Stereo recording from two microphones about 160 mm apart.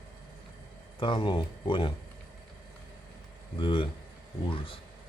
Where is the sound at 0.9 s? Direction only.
30° left (ahead or behind).